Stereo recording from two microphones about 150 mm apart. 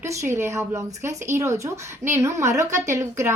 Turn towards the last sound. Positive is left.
turn(degrees=-20)  # may be behind; listen again after turning